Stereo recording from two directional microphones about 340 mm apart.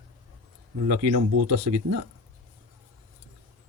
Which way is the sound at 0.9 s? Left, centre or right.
Right.